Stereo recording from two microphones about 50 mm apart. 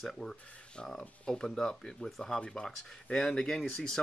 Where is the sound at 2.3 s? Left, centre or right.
Centre.